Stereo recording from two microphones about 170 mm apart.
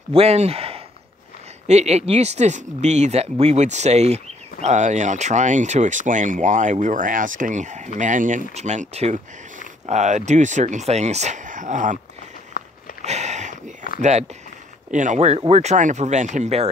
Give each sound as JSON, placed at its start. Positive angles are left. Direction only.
{"t": 0.1, "sound": "speech", "side_deg": -35}
{"t": 12.6, "sound": "sniff", "side_deg": 60}
{"t": 13.0, "sound": "sniff", "side_deg": -40}
{"t": 14.9, "sound": "speech", "side_deg": -45}